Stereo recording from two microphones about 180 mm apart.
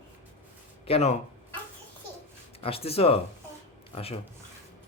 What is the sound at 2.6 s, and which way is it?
Speech, 35° left (ahead or behind).